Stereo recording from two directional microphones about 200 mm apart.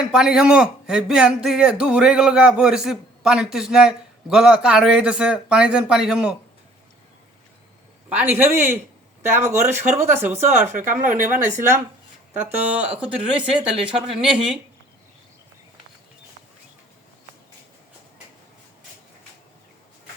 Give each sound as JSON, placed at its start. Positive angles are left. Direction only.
{"t": 0.0, "sound": "a man's voice", "side_deg": -5}
{"t": 8.1, "sound": "speech", "side_deg": -10}
{"t": 10.7, "sound": "speech", "side_deg": -40}
{"t": 12.5, "sound": "a man's voice", "side_deg": -10}